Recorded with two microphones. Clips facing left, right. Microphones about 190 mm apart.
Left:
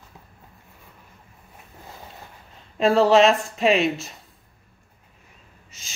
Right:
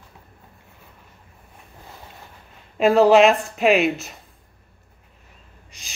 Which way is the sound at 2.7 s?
10° right (ahead or behind).